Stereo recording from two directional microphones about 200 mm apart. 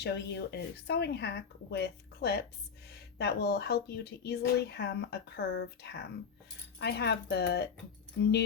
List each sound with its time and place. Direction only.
0.0 s speech: 55° left (ahead or behind)